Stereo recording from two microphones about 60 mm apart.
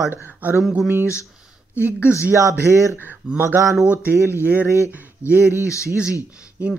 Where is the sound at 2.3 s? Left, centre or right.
Right.